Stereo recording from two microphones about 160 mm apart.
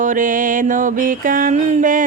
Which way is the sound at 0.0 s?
55° right (ahead or behind).